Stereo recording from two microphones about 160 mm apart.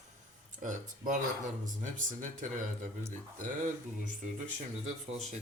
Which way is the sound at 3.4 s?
55° right (ahead or behind).